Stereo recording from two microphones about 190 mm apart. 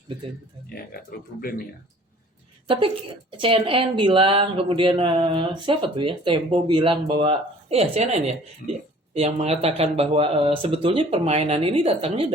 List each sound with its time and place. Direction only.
1.4 s speech: 50° left (ahead or behind)
2.7 s a woman's voice: 30° right (ahead or behind)
8.6 s speech: 50° left (ahead or behind)
9.1 s speech: 35° right (ahead or behind)